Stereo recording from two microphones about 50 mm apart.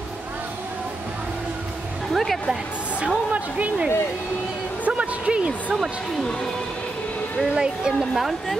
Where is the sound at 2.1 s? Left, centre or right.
Centre.